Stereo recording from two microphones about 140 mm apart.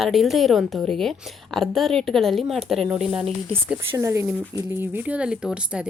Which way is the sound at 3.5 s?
20° right (ahead or behind).